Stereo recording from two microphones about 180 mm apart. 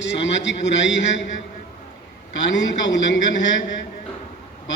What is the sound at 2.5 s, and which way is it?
Speech, 90° left.